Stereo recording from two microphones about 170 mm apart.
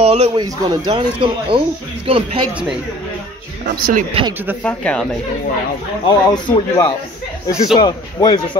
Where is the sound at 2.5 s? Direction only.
5° right (ahead or behind).